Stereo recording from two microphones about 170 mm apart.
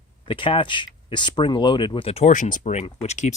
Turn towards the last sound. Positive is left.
turn(degrees=40)  # may be behind; listen again after turning